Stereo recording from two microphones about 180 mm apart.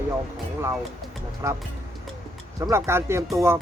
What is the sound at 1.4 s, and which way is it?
Speech, 15° right (ahead or behind).